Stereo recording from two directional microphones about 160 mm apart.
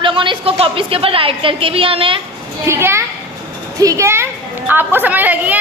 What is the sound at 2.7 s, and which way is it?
A child's voice, 15° right (ahead or behind).